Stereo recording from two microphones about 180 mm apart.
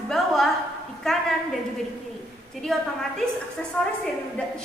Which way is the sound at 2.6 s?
Centre (ahead or behind).